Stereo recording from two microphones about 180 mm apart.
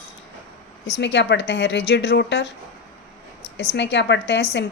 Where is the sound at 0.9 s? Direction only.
75° left (ahead or behind).